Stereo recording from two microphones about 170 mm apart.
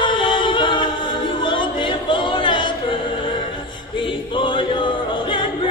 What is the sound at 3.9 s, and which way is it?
Choir, 30° left (ahead or behind).